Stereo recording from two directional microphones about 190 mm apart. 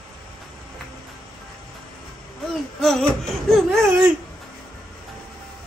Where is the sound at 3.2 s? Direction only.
Centre (ahead or behind).